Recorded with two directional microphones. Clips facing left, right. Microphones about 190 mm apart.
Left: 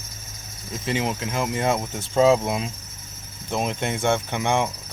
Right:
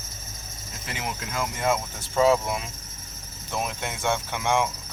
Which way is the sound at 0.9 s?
25° left (ahead or behind).